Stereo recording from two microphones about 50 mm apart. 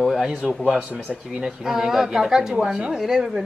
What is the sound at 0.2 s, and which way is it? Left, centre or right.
A woman's voice, centre.